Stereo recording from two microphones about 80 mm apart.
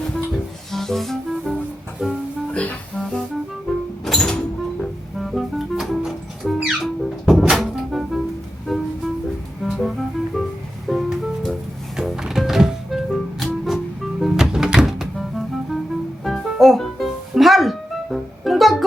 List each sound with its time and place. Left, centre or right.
0.7 s music: centre
2.5 s music: centre
3.0 s music: centre